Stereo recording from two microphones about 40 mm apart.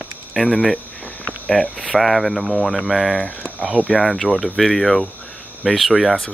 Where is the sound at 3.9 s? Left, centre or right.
Right.